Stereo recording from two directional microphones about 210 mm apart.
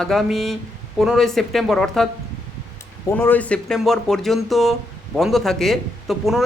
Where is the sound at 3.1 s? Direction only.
10° left (ahead or behind).